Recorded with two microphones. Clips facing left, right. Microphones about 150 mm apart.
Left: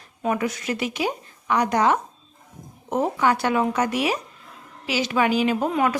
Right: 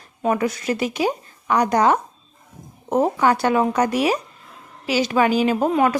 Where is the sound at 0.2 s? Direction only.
35° right (ahead or behind).